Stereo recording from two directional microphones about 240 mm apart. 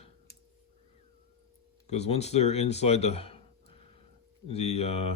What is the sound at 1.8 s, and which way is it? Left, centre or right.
Speech, left.